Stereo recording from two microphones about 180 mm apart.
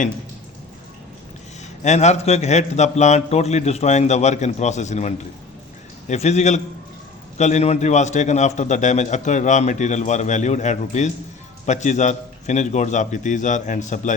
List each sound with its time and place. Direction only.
1.8 s a man's voice: 40° left (ahead or behind)